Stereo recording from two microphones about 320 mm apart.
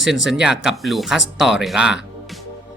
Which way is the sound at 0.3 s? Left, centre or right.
Centre.